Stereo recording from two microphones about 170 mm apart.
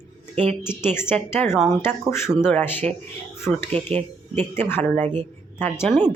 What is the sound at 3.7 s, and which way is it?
Speech, 40° right (ahead or behind).